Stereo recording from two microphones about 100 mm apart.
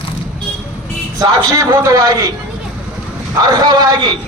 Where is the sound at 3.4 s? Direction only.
40° right (ahead or behind).